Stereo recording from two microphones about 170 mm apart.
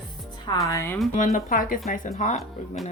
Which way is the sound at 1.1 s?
50° left (ahead or behind).